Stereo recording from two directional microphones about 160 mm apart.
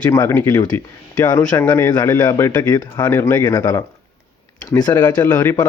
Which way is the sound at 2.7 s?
25° left (ahead or behind).